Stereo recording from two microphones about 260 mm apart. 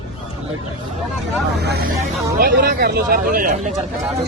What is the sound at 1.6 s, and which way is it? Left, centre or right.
Vehicle, right.